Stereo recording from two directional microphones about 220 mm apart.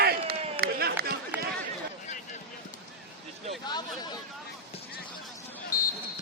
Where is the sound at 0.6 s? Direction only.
45° right (ahead or behind).